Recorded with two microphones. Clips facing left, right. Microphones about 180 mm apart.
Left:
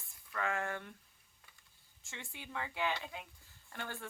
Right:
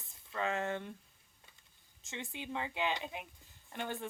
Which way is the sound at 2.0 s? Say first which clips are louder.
Right 6 dB; 20° right (ahead or behind).